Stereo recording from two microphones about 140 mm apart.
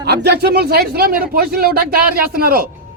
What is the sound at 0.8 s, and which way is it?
Speech, 90° right.